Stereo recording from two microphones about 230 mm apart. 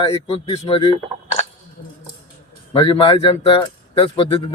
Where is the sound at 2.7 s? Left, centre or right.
Centre.